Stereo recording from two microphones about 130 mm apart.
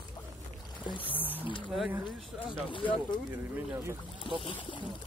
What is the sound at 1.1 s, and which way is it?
Speech, 15° right (ahead or behind).